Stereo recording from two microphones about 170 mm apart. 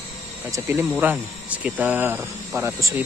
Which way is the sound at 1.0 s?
10° right (ahead or behind).